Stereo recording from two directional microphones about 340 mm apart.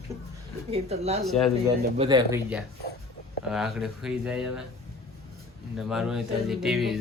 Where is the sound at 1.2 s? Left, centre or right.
Centre.